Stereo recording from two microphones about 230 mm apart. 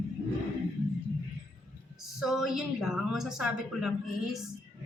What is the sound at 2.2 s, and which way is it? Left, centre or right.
Speech, centre.